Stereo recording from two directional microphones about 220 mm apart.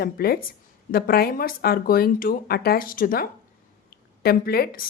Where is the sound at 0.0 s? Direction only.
45° left (ahead or behind).